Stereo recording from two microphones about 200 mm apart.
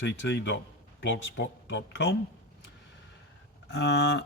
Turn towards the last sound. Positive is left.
turn(degrees=60)  # may be behind; listen again after turning